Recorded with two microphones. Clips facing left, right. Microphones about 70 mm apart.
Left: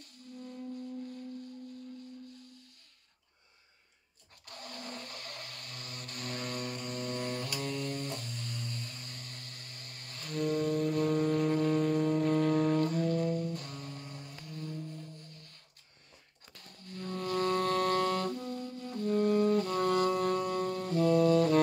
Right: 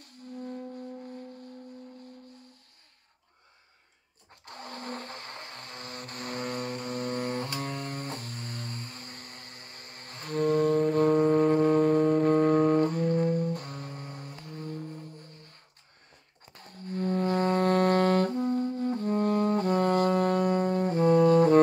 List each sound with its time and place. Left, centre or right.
0.0 s music: right
4.5 s a sound: right
16.5 s music: right